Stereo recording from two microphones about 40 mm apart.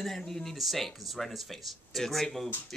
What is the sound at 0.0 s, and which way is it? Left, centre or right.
Speech, centre.